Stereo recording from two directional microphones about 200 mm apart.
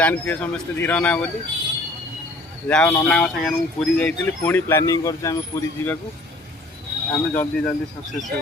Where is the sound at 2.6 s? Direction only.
10° left (ahead or behind).